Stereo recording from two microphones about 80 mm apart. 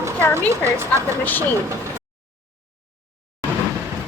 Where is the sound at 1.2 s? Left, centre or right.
Left.